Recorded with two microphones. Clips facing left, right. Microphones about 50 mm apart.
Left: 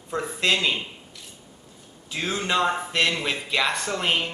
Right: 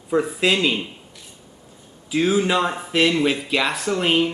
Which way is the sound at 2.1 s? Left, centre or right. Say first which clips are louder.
Right 7 dB; centre.